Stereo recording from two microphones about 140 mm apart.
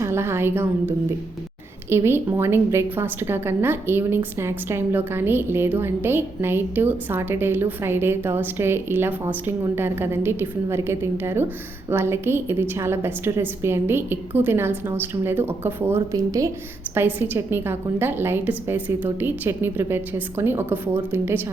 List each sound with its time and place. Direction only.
0.0 s a woman's voice: 20° right (ahead or behind)